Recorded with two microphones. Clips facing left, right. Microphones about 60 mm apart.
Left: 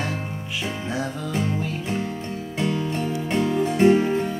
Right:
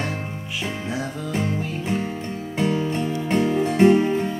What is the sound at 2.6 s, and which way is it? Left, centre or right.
Music, right.